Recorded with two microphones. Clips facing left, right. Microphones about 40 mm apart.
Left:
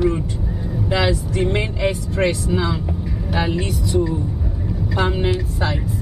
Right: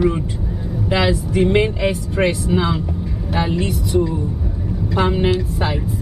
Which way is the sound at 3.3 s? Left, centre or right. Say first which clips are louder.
Right 2 dB; centre.